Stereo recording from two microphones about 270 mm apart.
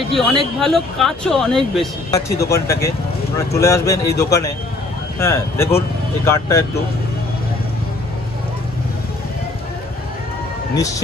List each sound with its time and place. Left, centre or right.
0.1 s speech: centre